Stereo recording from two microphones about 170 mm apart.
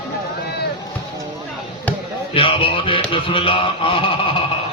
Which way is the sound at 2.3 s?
30° left (ahead or behind).